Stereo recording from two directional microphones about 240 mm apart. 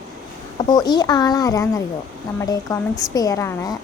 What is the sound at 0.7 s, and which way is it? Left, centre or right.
Speech, centre.